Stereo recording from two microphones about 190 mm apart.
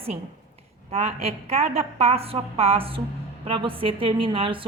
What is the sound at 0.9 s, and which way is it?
A woman's voice, 35° right (ahead or behind).